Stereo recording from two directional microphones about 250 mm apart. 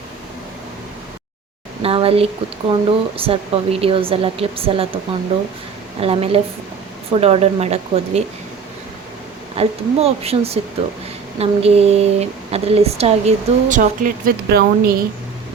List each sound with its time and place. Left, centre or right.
1.8 s speech: right
6.0 s speech: right
9.6 s speech: right